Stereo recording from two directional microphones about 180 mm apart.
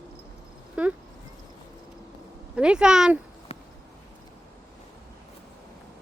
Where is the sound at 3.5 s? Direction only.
35° left (ahead or behind).